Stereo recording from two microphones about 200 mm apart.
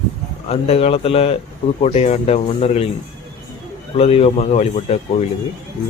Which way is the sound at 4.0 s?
30° left (ahead or behind).